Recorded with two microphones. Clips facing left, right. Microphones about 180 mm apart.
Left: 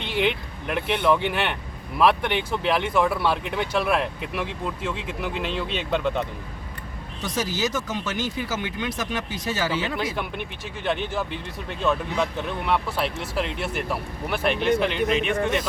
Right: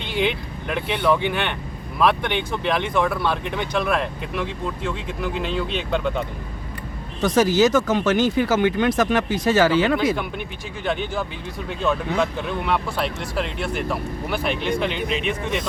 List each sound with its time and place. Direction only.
0.0 s speech: centre (ahead or behind)
7.2 s speech: 50° right (ahead or behind)
7.6 s speech: 75° right (ahead or behind); by 9.1 s 55° right (ahead or behind)
9.5 s speech: 75° right (ahead or behind)
10.8 s speech: centre (ahead or behind)